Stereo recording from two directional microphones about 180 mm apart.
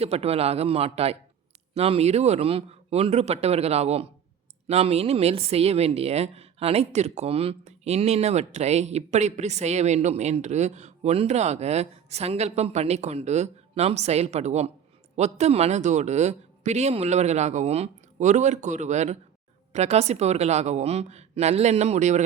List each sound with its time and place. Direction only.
0.0 s speech: 35° right (ahead or behind)